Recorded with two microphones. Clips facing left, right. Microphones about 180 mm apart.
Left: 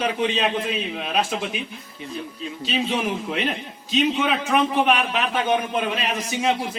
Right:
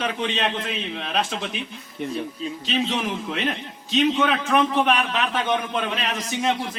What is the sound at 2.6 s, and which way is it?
Speech, 10° left (ahead or behind).